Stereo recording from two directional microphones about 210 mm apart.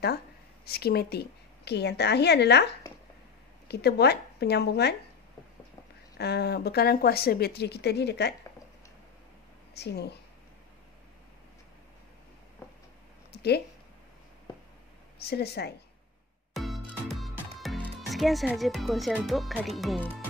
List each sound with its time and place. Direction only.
0.7 s speech: 50° left (ahead or behind)
6.1 s speech: 50° left (ahead or behind)
9.8 s speech: 50° left (ahead or behind)
13.3 s a sound: 50° left (ahead or behind)
15.2 s speech: 50° left (ahead or behind)
16.5 s music: centre (ahead or behind)
17.6 s speech: centre (ahead or behind)